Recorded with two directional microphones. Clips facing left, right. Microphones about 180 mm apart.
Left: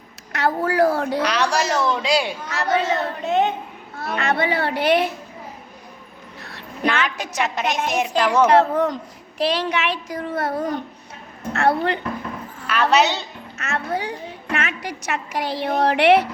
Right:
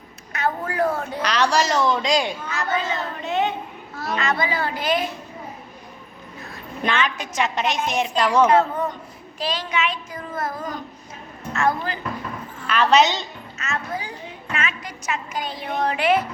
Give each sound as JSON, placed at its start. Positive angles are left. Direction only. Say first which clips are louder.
{"t": 0.3, "sound": "a woman's voice", "louder": "left 5 dB", "side_deg": 80}
{"t": 1.2, "sound": "a woman's voice", "louder": "even", "side_deg": 10}
{"t": 2.5, "sound": "a child's voice", "louder": "left 4 dB", "side_deg": 75}
{"t": 3.2, "sound": "a child's voice", "louder": "left 3 dB", "side_deg": 50}
{"t": 7.0, "sound": "a child's voice", "louder": "even", "side_deg": 70}
{"t": 7.5, "sound": "speech", "louder": "left 1 dB", "side_deg": 5}
{"t": 8.4, "sound": "speech", "louder": "left 3 dB", "side_deg": 80}
{"t": 9.4, "sound": "a child's voice", "louder": "left 4 dB", "side_deg": 65}
{"t": 12.6, "sound": "a woman's voice", "louder": "right 1 dB", "side_deg": 5}
{"t": 13.6, "sound": "a woman's voice", "louder": "left 4 dB", "side_deg": 65}